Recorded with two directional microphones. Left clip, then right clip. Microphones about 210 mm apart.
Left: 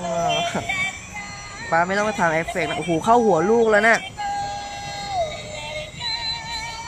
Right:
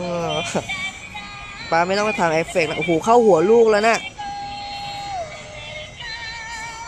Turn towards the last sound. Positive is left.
turn(degrees=15)  # may be behind; listen again after turning